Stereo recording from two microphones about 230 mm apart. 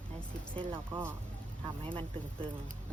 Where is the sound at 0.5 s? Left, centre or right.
Right.